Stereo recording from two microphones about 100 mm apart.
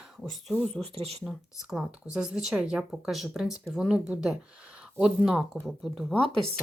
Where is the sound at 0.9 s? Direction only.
90° right.